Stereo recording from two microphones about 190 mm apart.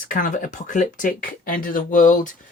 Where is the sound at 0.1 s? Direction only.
45° left (ahead or behind).